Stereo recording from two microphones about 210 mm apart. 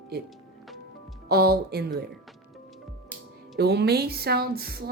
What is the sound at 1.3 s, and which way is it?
Speech, 45° right (ahead or behind).